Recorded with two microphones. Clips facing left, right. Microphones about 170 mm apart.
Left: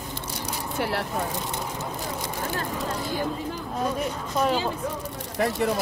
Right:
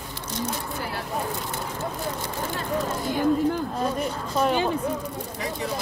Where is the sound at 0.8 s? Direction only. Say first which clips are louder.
Left 5 dB; 75° left (ahead or behind).